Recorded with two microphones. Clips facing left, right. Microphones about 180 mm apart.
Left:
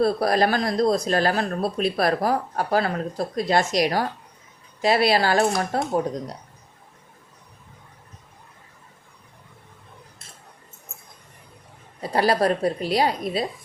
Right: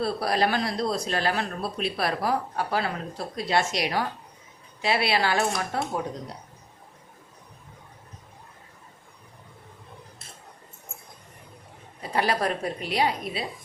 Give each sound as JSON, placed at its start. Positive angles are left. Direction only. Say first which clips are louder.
{"t": 0.0, "sound": "a woman's voice", "louder": "left 5 dB", "side_deg": 45}
{"t": 12.1, "sound": "a woman's voice", "louder": "left 5 dB", "side_deg": 35}